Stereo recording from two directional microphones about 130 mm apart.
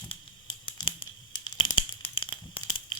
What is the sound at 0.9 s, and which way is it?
Tearing, 35° left (ahead or behind).